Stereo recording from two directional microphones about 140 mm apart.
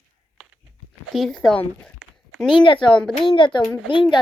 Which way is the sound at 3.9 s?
35° left (ahead or behind).